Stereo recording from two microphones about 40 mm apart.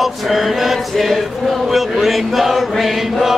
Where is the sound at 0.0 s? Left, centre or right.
Centre.